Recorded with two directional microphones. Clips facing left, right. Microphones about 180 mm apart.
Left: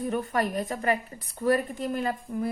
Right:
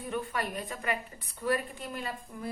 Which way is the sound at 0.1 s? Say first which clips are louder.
Left 3 dB; 40° left (ahead or behind).